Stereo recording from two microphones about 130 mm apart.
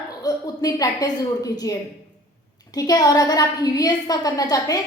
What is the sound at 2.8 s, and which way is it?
A woman's voice, 30° left (ahead or behind).